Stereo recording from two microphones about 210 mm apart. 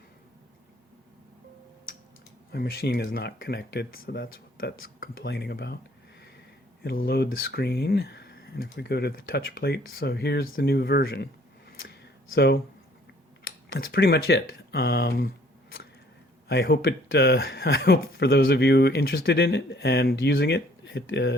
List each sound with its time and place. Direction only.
2.5 s speech: 45° left (ahead or behind)
6.8 s speech: 50° left (ahead or behind)
11.8 s a sound: 55° left (ahead or behind)
13.7 s speech: 50° left (ahead or behind)
16.5 s speech: 50° left (ahead or behind)